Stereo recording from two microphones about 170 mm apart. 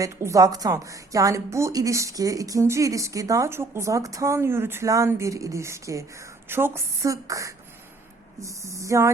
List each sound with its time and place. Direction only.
0.0 s a woman's voice: 20° right (ahead or behind)